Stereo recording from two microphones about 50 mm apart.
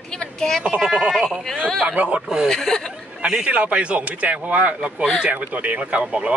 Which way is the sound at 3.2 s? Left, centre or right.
Right.